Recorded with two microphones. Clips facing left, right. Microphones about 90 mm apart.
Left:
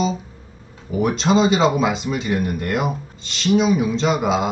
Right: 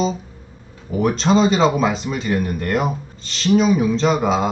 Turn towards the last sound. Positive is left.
turn(degrees=5)  # may be behind; listen again after turning